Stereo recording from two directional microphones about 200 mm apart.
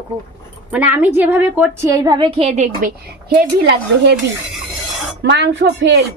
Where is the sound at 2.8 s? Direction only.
55° right (ahead or behind).